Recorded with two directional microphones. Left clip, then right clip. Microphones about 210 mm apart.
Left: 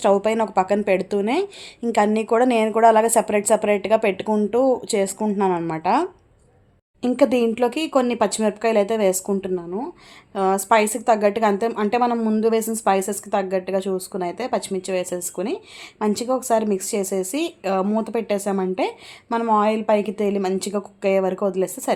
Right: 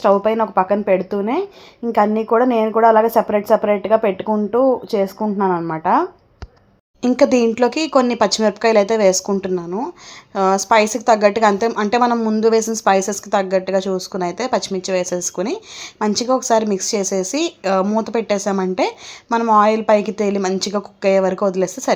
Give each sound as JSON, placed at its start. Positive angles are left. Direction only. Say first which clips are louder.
{"t": 0.0, "sound": "a woman's voice", "louder": "right 3 dB", "side_deg": 0}
{"t": 2.0, "sound": "a woman's voice", "louder": "right 3 dB", "side_deg": -10}
{"t": 7.0, "sound": "a woman's voice", "louder": "right 4 dB", "side_deg": -20}